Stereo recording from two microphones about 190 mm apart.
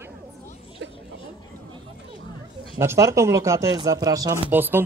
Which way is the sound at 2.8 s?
15° right (ahead or behind).